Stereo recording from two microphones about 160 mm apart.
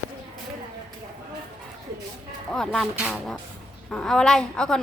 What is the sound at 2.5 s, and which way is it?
A woman's voice, 5° left (ahead or behind).